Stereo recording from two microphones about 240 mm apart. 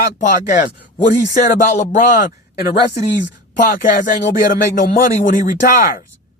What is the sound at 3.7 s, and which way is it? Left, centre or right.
Speech, left.